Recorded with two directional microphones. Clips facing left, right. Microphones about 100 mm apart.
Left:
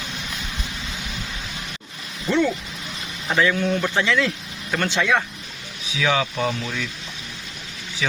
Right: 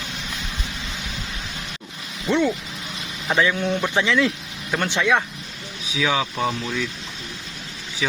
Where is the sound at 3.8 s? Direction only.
15° right (ahead or behind).